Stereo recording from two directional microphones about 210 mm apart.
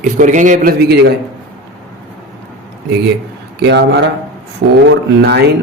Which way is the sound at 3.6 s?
55° right (ahead or behind).